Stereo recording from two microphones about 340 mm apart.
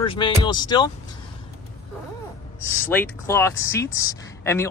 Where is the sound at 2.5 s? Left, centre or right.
Centre.